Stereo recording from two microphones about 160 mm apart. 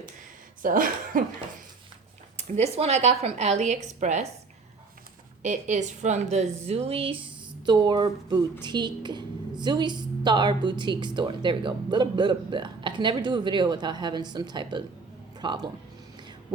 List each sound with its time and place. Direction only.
0.6 s speech: 60° right (ahead or behind)
2.3 s speech: 45° right (ahead or behind)
5.4 s a woman's voice: 50° right (ahead or behind); by 15.7 s 30° right (ahead or behind)